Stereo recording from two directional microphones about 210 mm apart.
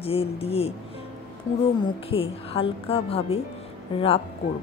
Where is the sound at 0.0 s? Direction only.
30° left (ahead or behind).